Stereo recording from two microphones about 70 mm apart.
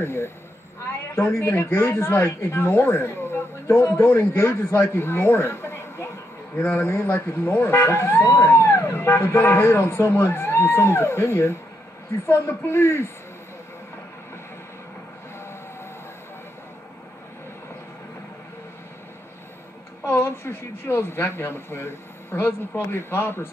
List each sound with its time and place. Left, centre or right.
0.0 s speech: left
6.6 s a man's voice: left
6.9 s speech: left
20.1 s speech: left